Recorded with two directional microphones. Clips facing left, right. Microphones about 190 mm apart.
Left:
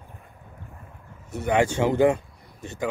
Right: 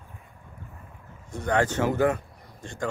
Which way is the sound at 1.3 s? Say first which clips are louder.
Left 3 dB; 10° left (ahead or behind).